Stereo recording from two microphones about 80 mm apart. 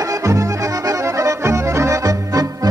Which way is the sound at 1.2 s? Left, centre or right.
Right.